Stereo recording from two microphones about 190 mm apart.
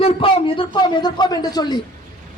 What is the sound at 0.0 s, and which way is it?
A man's voice, 30° left (ahead or behind).